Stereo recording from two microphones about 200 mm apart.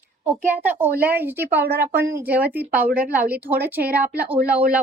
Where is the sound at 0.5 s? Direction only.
10° right (ahead or behind).